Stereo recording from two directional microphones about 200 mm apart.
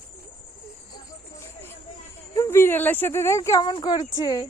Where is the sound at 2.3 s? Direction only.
15° left (ahead or behind).